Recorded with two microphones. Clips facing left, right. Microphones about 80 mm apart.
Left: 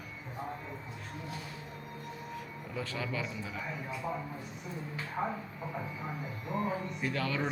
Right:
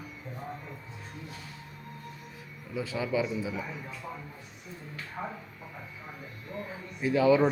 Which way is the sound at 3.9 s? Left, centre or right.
Centre.